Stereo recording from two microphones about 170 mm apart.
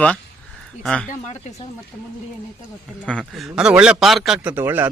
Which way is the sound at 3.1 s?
5° left (ahead or behind).